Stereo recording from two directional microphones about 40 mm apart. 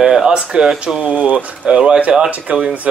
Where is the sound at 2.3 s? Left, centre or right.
Right.